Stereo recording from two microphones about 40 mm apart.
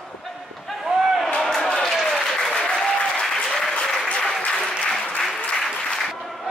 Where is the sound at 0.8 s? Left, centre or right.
Centre.